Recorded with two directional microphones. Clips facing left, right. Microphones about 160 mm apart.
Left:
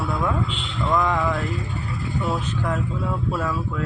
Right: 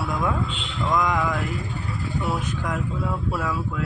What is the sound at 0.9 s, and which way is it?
Speech, 15° right (ahead or behind).